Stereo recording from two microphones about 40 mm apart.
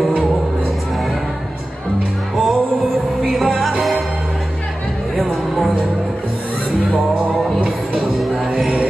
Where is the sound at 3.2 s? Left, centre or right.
Centre.